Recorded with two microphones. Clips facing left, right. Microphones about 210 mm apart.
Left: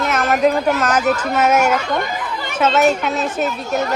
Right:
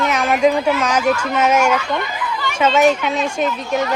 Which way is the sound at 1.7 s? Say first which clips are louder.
Left 1 dB; 45° left (ahead or behind).